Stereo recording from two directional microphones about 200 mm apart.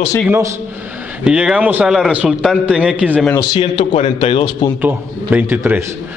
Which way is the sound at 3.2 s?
15° left (ahead or behind).